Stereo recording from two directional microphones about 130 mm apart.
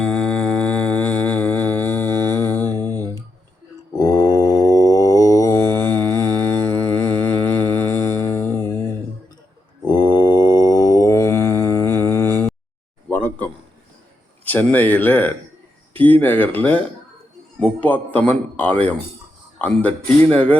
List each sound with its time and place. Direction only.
0.0 s music: 5° left (ahead or behind)
3.9 s mantra: 30° left (ahead or behind)
5.6 s mantra: 15° left (ahead or behind)
9.8 s mantra: 35° left (ahead or behind)
13.1 s a sound: 15° left (ahead or behind)
14.4 s a man's voice: 15° left (ahead or behind)